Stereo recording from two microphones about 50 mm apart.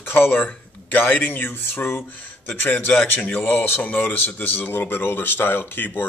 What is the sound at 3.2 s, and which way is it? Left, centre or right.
Speech, left.